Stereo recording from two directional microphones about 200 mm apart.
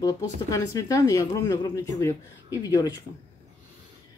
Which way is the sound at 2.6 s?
20° left (ahead or behind).